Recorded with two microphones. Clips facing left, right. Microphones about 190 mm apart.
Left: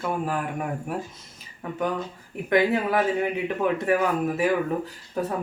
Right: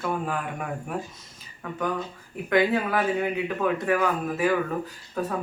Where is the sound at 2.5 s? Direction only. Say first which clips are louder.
Left 1 dB; 20° left (ahead or behind).